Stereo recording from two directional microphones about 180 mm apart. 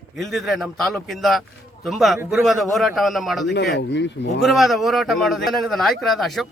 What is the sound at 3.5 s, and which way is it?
Speech, 70° left (ahead or behind).